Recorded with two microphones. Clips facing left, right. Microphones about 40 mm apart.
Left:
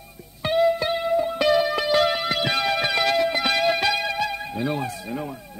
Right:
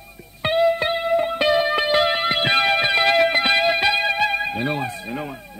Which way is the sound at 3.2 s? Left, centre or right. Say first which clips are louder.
Right 5 dB; right.